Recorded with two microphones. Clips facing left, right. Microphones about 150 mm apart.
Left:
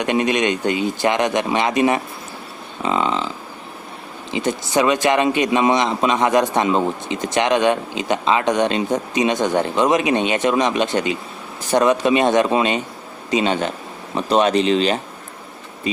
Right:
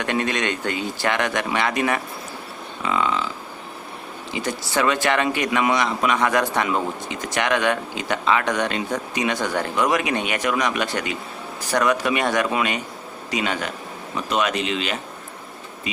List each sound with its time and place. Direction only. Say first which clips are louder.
0.0 s a man's voice: left 5 dB; 20° left (ahead or behind)
4.3 s a man's voice: left 5 dB; 20° left (ahead or behind)